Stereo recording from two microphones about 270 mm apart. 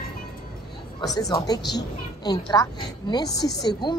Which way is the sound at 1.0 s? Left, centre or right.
Centre.